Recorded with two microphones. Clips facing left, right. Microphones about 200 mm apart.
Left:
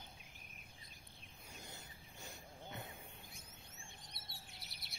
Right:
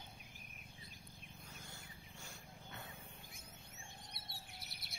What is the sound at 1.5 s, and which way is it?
Wild animals, 20° left (ahead or behind).